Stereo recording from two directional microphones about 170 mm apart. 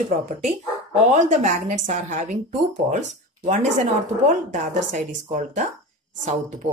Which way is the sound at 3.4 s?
45° right (ahead or behind).